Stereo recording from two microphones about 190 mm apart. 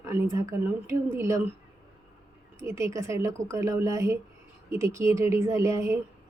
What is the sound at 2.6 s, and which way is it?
A woman's voice, 15° right (ahead or behind).